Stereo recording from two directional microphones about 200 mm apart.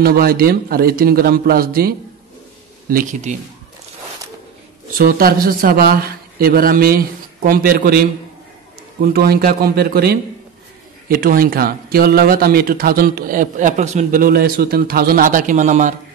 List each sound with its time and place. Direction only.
0.0 s speech: 50° right (ahead or behind)
4.9 s speech: 45° right (ahead or behind)
9.0 s speech: 50° right (ahead or behind)